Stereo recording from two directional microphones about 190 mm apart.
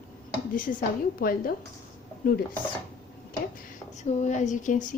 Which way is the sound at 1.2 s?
50° left (ahead or behind).